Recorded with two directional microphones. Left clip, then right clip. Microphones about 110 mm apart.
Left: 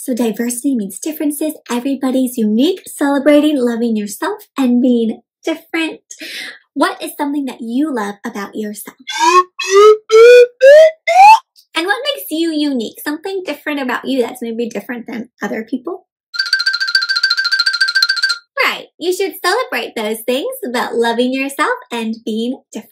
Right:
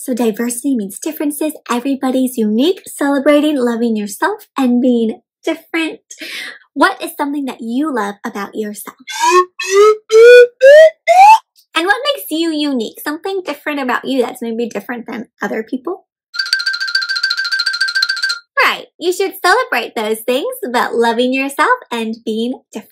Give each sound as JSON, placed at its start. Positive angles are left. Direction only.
{"t": 0.0, "sound": "a child's voice", "side_deg": -40}
{"t": 9.0, "sound": "music", "side_deg": 0}
{"t": 11.7, "sound": "speech", "side_deg": -35}
{"t": 16.3, "sound": "music", "side_deg": 0}
{"t": 18.5, "sound": "speech", "side_deg": -40}